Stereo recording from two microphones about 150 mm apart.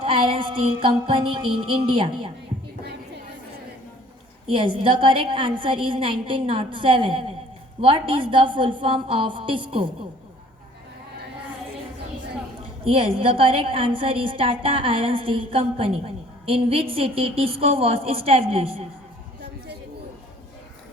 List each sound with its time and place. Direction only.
0.0 s a woman's voice: 35° right (ahead or behind)
4.4 s a woman's voice: 35° right (ahead or behind)
12.8 s a woman's voice: 40° right (ahead or behind)